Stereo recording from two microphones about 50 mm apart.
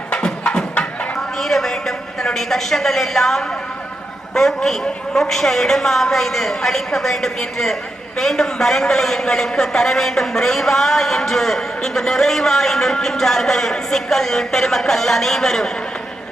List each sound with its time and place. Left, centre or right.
0.1 s music: left
1.4 s a sound: centre
4.4 s a man's voice: centre